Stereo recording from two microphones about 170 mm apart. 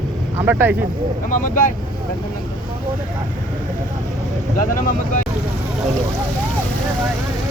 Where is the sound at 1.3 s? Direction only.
50° left (ahead or behind).